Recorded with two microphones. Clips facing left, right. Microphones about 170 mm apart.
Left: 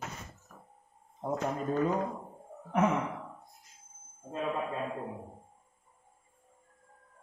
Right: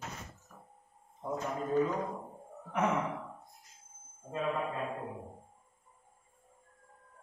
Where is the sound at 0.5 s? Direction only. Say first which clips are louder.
Left 1 dB; 50° left (ahead or behind).